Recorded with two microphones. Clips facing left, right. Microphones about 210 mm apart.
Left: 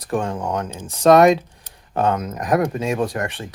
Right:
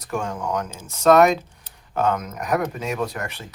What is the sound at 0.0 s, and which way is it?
Speech, 30° left (ahead or behind).